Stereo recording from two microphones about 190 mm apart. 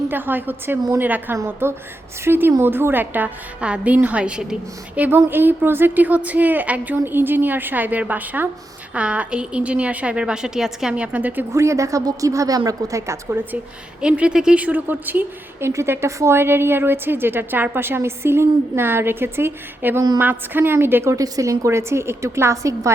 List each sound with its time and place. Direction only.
0.1 s a woman's voice: 10° right (ahead or behind)